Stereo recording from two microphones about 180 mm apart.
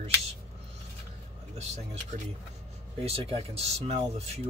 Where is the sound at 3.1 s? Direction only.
35° right (ahead or behind).